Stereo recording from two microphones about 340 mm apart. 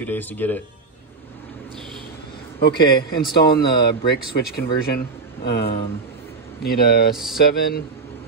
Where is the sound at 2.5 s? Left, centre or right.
Left.